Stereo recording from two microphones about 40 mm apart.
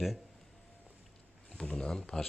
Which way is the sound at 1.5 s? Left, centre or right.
Centre.